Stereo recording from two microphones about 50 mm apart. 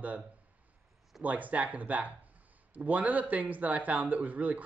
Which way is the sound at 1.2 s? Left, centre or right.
Right.